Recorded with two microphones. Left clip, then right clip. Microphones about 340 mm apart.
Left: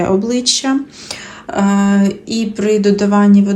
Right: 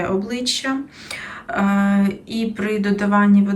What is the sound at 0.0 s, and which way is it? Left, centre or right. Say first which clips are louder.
Speech: left 7 dB; centre.